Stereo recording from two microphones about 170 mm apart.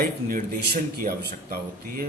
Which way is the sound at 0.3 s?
60° right (ahead or behind).